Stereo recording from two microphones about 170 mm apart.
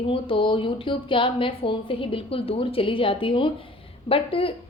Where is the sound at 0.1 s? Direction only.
30° left (ahead or behind).